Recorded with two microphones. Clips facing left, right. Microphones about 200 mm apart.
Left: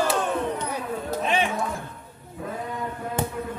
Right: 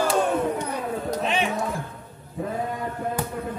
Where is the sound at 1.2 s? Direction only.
Centre (ahead or behind).